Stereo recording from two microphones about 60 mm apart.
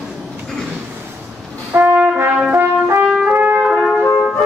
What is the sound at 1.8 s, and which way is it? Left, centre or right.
Brass instrument, right.